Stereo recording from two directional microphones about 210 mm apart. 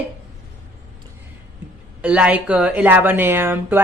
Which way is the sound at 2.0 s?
5° right (ahead or behind).